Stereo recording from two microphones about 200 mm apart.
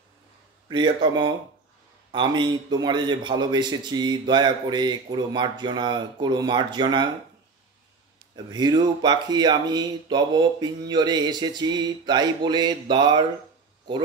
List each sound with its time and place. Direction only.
0.7 s a man's voice: 20° right (ahead or behind)
8.5 s a man's voice: 20° right (ahead or behind)